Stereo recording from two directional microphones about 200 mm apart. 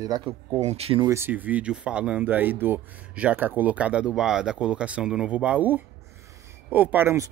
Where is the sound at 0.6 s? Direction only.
30° right (ahead or behind).